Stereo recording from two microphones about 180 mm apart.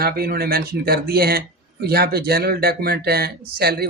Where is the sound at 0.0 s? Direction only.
60° right (ahead or behind).